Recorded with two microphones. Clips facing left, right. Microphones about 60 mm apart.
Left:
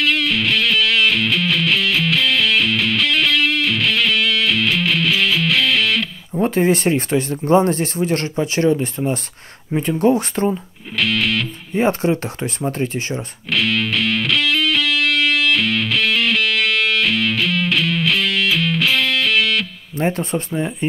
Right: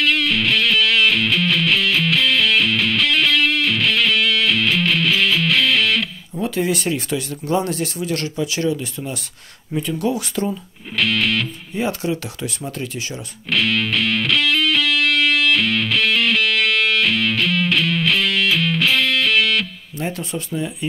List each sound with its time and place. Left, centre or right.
0.0 s music: centre
6.4 s speech: left
11.0 s music: centre
11.7 s speech: left
13.5 s music: centre
20.0 s speech: left